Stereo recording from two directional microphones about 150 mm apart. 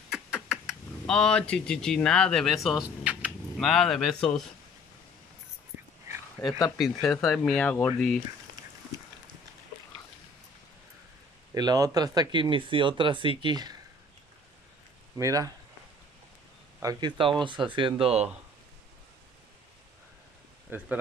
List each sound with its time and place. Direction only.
0.1 s a sound: 5° right (ahead or behind)
3.3 s speech: 5° left (ahead or behind)
6.8 s speech: centre (ahead or behind)
11.5 s speech: 25° right (ahead or behind)
15.1 s speech: 20° right (ahead or behind)
16.8 s speech: 30° right (ahead or behind)
20.7 s speech: 10° right (ahead or behind)